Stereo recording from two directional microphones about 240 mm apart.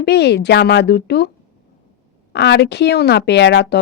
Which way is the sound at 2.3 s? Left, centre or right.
Left.